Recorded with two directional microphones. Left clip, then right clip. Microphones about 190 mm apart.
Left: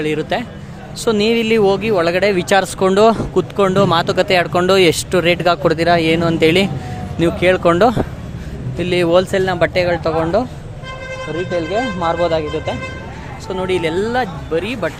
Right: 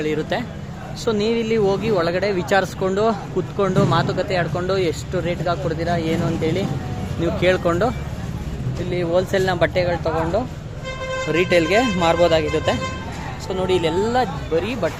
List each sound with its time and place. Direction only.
0.0 s speech: 20° left (ahead or behind); by 6.7 s 35° left (ahead or behind)
7.3 s speech: 20° left (ahead or behind); by 9.2 s 35° left (ahead or behind)
9.3 s speech: 15° left (ahead or behind)
11.3 s speech: 15° right (ahead or behind)
13.5 s speech: 10° left (ahead or behind)